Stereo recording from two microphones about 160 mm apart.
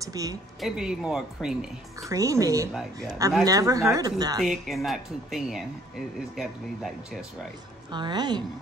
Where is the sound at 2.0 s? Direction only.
20° right (ahead or behind).